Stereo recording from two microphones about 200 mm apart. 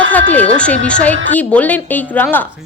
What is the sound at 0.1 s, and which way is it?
A woman's voice, 10° left (ahead or behind).